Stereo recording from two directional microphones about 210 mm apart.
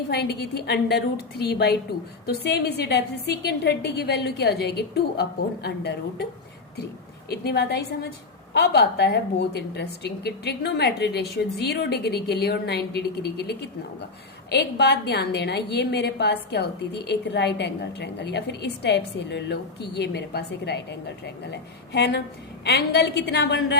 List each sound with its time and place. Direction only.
0.1 s a woman's voice: 50° left (ahead or behind)
7.3 s a woman's voice: 50° left (ahead or behind)